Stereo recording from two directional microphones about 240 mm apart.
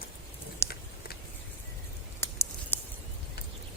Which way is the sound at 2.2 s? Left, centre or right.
Centre.